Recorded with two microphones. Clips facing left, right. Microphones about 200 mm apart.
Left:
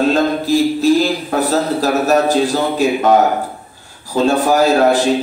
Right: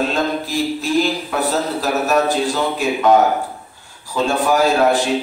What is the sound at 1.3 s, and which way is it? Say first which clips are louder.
A man's voice: left 4 dB; 40° left (ahead or behind).